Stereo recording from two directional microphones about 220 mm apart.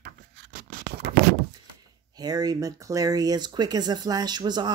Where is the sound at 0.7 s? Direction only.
40° right (ahead or behind).